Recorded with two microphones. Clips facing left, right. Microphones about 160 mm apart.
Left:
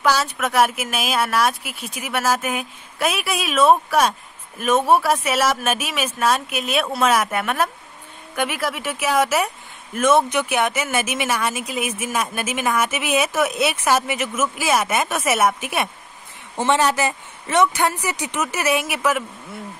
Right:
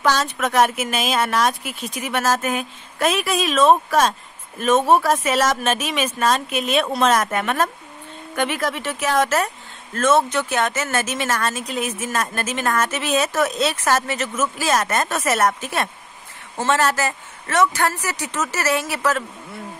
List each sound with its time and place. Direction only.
0.0 s speech: 5° left (ahead or behind)